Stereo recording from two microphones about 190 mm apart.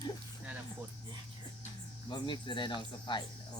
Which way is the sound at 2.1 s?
25° left (ahead or behind).